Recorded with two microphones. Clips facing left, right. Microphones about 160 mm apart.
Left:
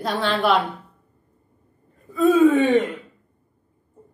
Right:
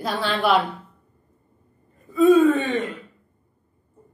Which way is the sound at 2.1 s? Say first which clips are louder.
Right 2 dB; centre (ahead or behind).